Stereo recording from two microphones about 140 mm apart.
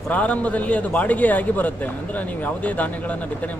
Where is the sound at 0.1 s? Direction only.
10° left (ahead or behind).